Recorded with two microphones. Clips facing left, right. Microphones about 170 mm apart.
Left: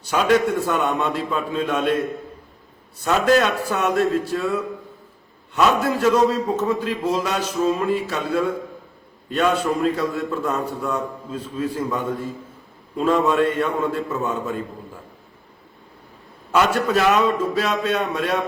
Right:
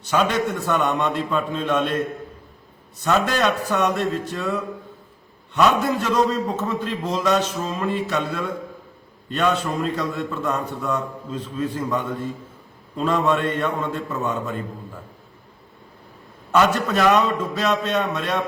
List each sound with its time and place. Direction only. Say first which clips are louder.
0.0 s a man's voice: left 3 dB; 10° left (ahead or behind)
3.0 s a man's voice: left 3 dB; 5° left (ahead or behind)
16.5 s a man's voice: even; 10° left (ahead or behind)